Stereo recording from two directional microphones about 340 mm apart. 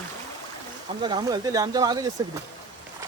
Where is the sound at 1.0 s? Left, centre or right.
Centre.